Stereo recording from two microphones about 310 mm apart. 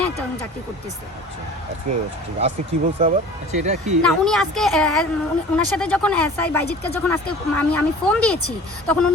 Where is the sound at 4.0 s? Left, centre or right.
Centre.